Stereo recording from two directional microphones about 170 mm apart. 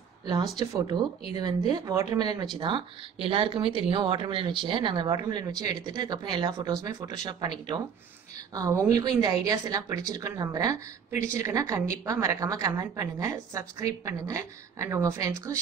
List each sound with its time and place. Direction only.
0.6 s speech: 25° right (ahead or behind)